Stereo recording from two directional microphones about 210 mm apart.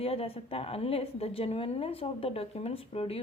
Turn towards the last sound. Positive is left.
turn(degrees=30)  # may be behind; listen again after turning